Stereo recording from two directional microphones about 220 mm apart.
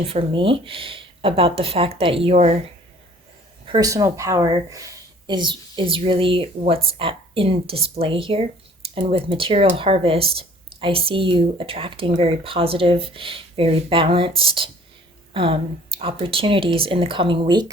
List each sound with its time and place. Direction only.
0.0 s speech: 25° right (ahead or behind)
3.7 s speech: 15° right (ahead or behind)